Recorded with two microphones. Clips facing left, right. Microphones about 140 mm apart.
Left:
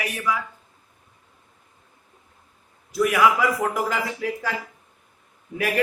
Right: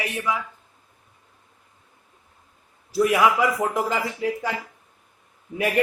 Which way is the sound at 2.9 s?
25° right (ahead or behind).